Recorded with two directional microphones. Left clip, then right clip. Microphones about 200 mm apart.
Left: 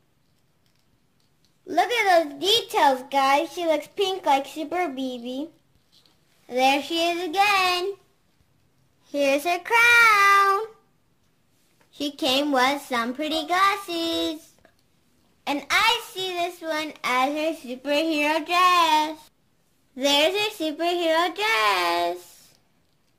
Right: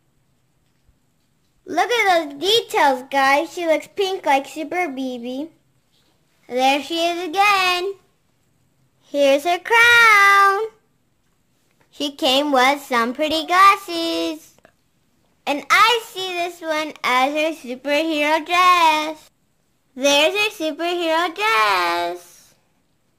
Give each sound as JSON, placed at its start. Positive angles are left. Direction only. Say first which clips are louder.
{"t": 1.7, "sound": "a child's voice", "louder": "right 3 dB", "side_deg": -35}
{"t": 9.0, "sound": "child singing", "louder": "right 6 dB", "side_deg": -25}
{"t": 11.9, "sound": "a child's voice", "louder": "right 5 dB", "side_deg": -40}